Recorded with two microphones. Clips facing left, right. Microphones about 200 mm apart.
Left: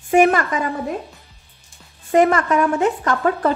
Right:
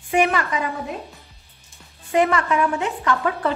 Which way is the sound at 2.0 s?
45° left (ahead or behind).